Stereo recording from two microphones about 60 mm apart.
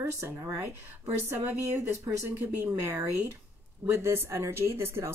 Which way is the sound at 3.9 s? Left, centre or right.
Right.